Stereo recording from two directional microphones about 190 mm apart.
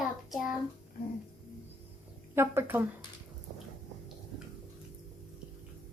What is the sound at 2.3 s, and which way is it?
Speech, 10° right (ahead or behind).